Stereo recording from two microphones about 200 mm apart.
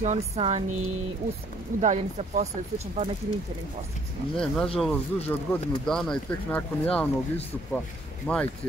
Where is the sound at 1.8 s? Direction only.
35° right (ahead or behind).